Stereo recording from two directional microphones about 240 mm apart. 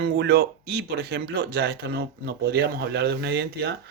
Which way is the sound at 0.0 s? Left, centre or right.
Right.